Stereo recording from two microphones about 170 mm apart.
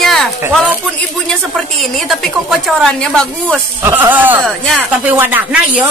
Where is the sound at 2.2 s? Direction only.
Centre (ahead or behind).